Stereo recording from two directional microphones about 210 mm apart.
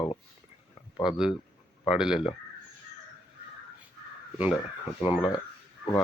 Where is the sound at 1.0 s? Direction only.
5° right (ahead or behind).